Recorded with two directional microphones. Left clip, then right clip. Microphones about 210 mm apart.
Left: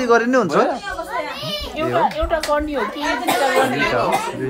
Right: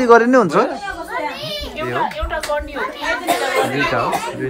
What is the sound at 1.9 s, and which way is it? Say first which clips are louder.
Speech: left 3 dB; 45° left (ahead or behind).